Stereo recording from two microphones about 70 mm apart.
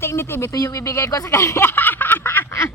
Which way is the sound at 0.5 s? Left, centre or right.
Left.